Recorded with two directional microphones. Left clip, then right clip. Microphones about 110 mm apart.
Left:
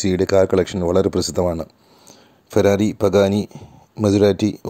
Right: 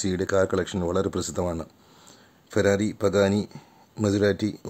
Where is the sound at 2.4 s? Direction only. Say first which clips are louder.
Left 7 dB; 40° left (ahead or behind).